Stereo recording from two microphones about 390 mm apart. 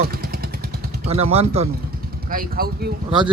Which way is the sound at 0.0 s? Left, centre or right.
Right.